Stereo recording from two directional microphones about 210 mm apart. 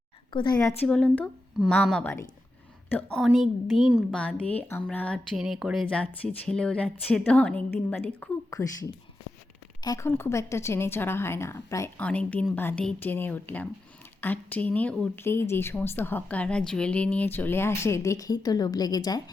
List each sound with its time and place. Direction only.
0.3 s a woman's voice: 20° left (ahead or behind)
0.9 s a woman's voice: 5° left (ahead or behind)